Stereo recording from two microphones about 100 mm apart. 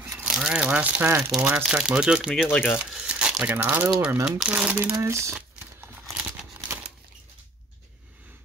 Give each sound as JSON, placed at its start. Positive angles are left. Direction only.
{"t": 0.1, "sound": "speech", "side_deg": -5}
{"t": 1.7, "sound": "speech", "side_deg": -10}
{"t": 2.5, "sound": "speech", "side_deg": 20}
{"t": 2.8, "sound": "crumpling", "side_deg": -10}
{"t": 3.4, "sound": "speech", "side_deg": -15}
{"t": 4.2, "sound": "speech", "side_deg": -5}
{"t": 4.9, "sound": "speech", "side_deg": -30}
{"t": 5.8, "sound": "crumpling", "side_deg": -20}